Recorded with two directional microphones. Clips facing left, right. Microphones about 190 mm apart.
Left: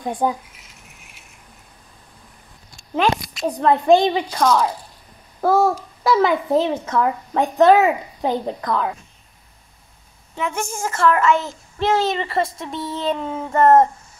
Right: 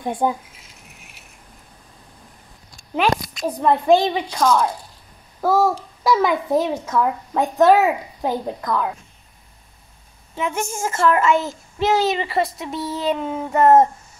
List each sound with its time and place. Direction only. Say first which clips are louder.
0.0 s a woman's voice: even; 25° right (ahead or behind)
3.3 s a child's voice: left 1 dB; 5° right (ahead or behind)
10.4 s a woman's voice: right 1 dB; 20° right (ahead or behind)
11.1 s a child's voice: even; 10° right (ahead or behind)